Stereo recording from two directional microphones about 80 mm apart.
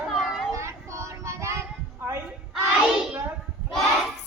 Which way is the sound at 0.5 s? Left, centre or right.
Right.